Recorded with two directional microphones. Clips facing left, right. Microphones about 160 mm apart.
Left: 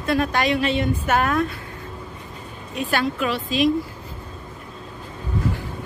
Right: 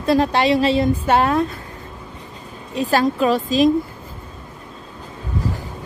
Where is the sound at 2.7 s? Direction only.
35° right (ahead or behind).